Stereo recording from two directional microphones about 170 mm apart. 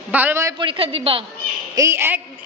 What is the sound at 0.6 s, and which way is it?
Speech, 35° right (ahead or behind).